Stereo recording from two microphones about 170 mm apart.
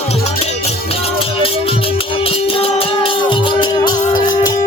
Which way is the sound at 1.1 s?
35° left (ahead or behind).